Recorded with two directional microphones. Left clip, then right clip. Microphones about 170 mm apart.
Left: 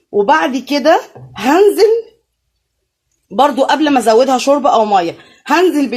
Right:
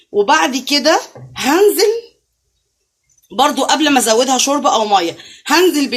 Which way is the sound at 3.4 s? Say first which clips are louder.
Left 2 dB; 45° left (ahead or behind).